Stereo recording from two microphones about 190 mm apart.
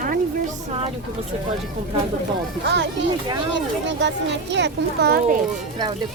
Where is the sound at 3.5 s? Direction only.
70° right (ahead or behind).